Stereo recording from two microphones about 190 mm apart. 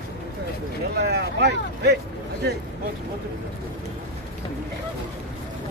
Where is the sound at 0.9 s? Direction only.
55° right (ahead or behind).